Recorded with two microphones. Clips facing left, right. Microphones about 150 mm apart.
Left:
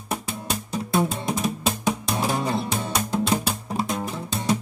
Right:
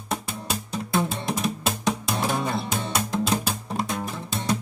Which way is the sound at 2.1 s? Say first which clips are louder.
Left 1 dB; 15° left (ahead or behind).